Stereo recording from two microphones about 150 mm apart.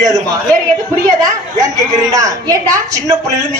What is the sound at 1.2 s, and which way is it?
A woman's voice, 25° right (ahead or behind).